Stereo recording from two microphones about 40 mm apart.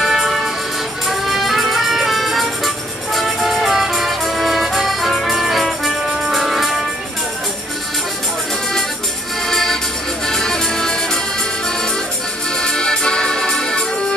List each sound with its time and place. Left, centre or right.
0.0 s music: centre
6.0 s brass instrument: centre
9.5 s music: centre
12.5 s music: centre